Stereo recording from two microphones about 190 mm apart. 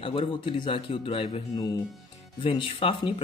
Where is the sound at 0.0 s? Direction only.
30° left (ahead or behind).